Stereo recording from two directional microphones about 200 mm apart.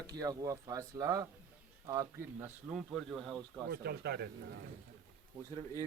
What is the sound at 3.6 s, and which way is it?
Speech, 55° right (ahead or behind).